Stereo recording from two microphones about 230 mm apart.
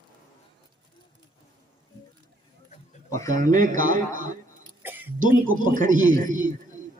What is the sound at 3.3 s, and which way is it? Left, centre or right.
A man's voice, right.